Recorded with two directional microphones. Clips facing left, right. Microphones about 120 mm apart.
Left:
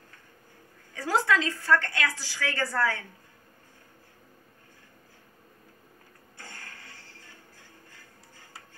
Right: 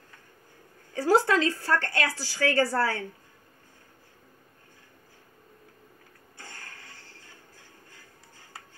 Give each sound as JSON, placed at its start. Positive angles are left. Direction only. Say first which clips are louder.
{"t": 0.9, "sound": "a woman's voice", "louder": "right 4 dB", "side_deg": -30}